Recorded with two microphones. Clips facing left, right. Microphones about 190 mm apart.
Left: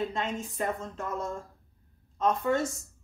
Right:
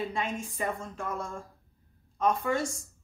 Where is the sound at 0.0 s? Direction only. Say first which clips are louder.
Left 1 dB; 10° right (ahead or behind).